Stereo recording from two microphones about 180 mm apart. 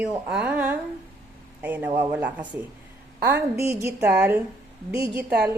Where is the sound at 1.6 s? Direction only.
10° right (ahead or behind).